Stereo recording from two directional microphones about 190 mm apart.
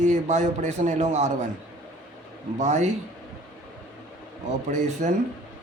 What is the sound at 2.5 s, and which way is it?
Speech, 40° right (ahead or behind).